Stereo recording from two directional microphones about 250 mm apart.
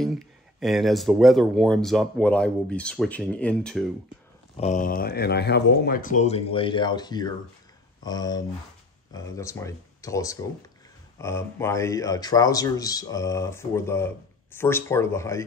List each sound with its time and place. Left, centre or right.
0.0 s speech: centre
4.6 s speech: left; by 15.4 s centre